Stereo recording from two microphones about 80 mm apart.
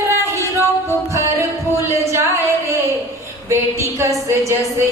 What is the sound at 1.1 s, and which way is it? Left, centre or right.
Music, right.